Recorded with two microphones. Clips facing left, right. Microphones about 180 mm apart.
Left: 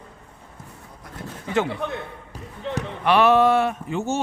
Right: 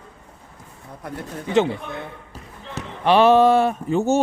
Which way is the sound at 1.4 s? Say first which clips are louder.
Right 5 dB; 25° right (ahead or behind).